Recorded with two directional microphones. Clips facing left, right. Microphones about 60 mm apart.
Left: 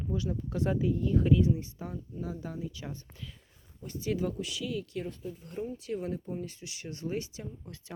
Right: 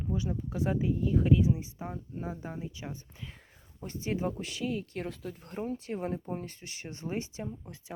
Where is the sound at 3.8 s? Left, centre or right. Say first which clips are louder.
Left 1 dB; right.